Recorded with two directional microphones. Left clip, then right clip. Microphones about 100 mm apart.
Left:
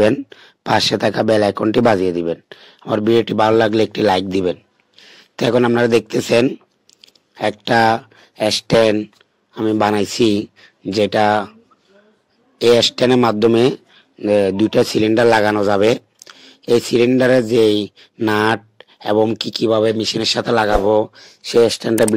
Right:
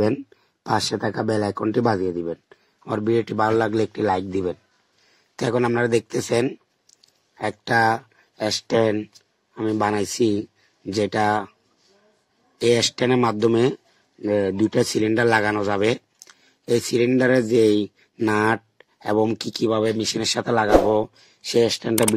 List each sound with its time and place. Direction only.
0.1 s speech: 55° left (ahead or behind)
2.9 s speech: 35° left (ahead or behind)
9.5 s speech: 35° left (ahead or behind)
12.5 s speech: 35° left (ahead or behind)
20.9 s speech: 25° left (ahead or behind)